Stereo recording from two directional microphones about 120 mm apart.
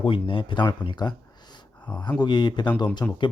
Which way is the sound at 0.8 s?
35° left (ahead or behind).